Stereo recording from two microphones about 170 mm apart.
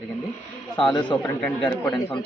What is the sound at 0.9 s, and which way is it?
Speech, 25° left (ahead or behind).